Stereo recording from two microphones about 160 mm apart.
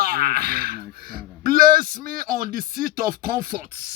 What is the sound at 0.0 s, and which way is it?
Speech, 65° right (ahead or behind).